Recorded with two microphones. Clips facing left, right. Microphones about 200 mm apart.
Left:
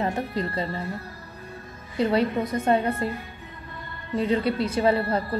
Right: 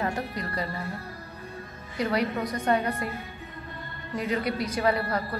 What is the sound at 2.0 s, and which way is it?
A woman's voice, 30° left (ahead or behind).